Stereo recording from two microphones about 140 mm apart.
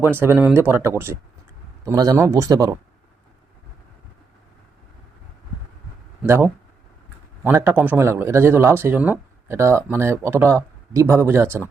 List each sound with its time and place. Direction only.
0.1 s speech: 15° right (ahead or behind)
6.2 s speech: 15° right (ahead or behind)